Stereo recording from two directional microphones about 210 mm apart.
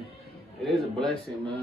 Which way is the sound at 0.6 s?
Centre (ahead or behind).